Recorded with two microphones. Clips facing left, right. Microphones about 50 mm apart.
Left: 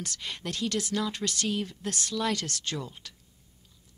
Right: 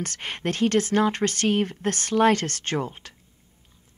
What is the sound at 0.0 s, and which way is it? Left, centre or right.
Speech, right.